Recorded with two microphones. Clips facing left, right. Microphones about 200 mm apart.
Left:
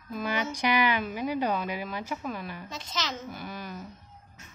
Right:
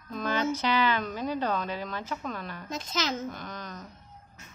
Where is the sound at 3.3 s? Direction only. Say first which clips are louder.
Left 2 dB; 10° left (ahead or behind).